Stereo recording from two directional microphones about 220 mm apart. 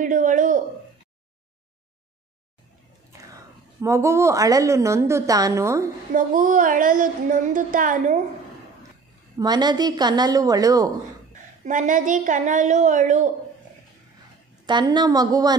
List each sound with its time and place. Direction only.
0.0 s a sound: 35° right (ahead or behind)
3.8 s a woman's voice: 15° right (ahead or behind)
6.1 s a woman's voice: 35° right (ahead or behind)
9.4 s a woman's voice: 20° right (ahead or behind)
11.6 s a woman's voice: 35° right (ahead or behind)
14.7 s a woman's voice: 20° right (ahead or behind)